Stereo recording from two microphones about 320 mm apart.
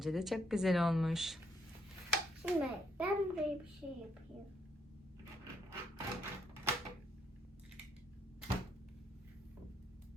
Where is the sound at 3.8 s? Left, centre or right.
Centre.